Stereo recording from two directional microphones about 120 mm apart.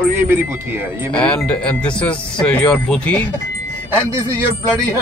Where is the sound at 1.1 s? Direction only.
10° left (ahead or behind).